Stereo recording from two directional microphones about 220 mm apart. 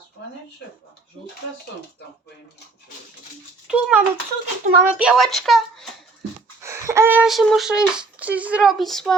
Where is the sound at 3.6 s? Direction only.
5° right (ahead or behind).